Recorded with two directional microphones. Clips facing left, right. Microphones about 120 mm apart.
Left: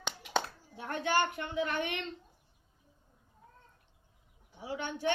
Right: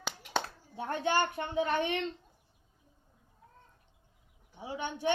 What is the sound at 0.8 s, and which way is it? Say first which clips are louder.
A child's voice: right 1 dB; 25° right (ahead or behind).